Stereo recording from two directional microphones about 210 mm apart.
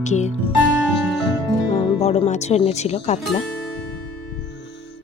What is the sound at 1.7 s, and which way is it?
Speech, 30° left (ahead or behind).